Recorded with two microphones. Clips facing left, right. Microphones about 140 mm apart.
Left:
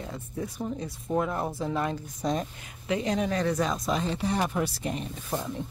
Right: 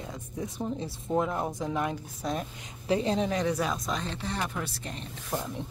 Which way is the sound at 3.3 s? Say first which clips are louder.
Left 1 dB; 15° right (ahead or behind).